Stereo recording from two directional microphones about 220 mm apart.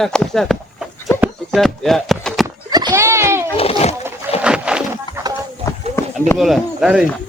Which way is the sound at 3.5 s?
30° left (ahead or behind).